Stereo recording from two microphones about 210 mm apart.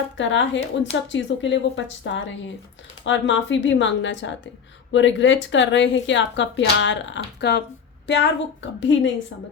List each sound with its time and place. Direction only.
0.2 s speech: 60° left (ahead or behind)